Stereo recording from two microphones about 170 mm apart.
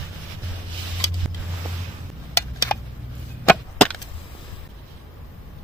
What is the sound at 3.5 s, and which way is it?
Wood, 5° left (ahead or behind).